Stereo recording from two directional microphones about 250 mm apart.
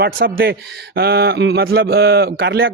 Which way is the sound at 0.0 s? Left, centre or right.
Right.